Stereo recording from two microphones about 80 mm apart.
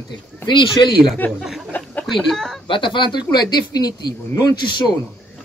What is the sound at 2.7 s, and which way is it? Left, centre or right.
Speech, left.